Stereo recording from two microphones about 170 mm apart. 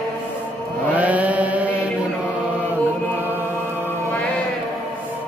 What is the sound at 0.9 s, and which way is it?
Chant, 10° right (ahead or behind).